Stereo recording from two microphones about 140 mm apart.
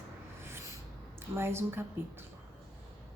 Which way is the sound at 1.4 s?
15° right (ahead or behind).